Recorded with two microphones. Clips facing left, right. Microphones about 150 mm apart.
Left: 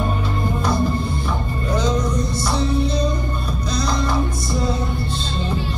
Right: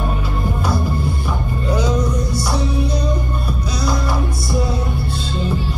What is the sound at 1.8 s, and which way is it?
Music, 10° right (ahead or behind).